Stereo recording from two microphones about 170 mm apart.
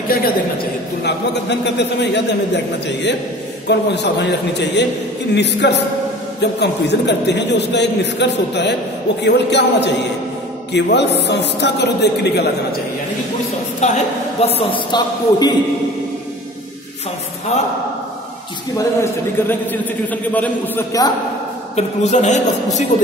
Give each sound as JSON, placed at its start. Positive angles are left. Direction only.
{"t": 1.0, "sound": "a man's voice", "side_deg": 90}
{"t": 13.7, "sound": "a woman's voice", "side_deg": 40}
{"t": 14.6, "sound": "speech", "side_deg": 30}
{"t": 18.8, "sound": "a man's voice", "side_deg": 15}
{"t": 21.7, "sound": "a man's voice", "side_deg": 40}